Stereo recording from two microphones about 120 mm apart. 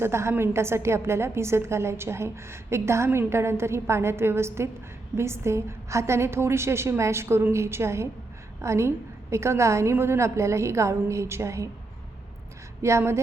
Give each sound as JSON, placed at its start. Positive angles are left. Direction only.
{"t": 0.0, "sound": "a woman's voice", "side_deg": -20}
{"t": 12.8, "sound": "a woman's voice", "side_deg": -20}